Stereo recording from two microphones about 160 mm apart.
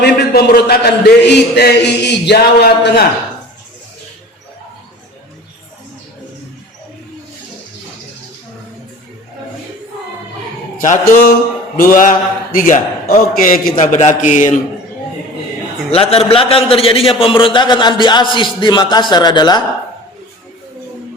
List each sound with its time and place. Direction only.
0.0 s a man's voice: 85° left
10.8 s a man's voice: 55° left (ahead or behind)
15.9 s a man's voice: 40° left (ahead or behind)